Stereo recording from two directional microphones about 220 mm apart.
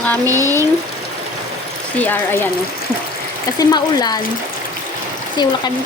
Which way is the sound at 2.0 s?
10° left (ahead or behind).